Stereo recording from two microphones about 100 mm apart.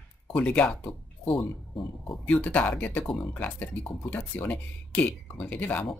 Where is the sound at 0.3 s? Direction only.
10° left (ahead or behind).